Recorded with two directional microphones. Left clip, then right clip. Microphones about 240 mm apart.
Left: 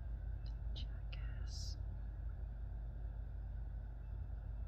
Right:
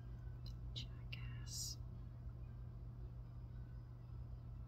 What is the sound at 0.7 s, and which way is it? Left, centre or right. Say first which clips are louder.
Whispering: right 3 dB; centre.